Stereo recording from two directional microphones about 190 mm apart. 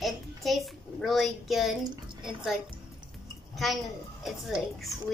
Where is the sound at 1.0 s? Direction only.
Centre (ahead or behind).